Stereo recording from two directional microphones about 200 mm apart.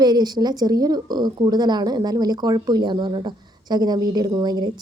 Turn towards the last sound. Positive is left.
turn(degrees=-20)  # may be behind; listen again after turning